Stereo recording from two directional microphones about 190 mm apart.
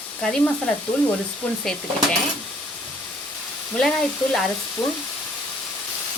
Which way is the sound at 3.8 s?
Centre (ahead or behind).